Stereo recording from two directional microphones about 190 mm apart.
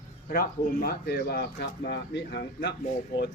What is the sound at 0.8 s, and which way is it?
A man's voice, 55° left (ahead or behind).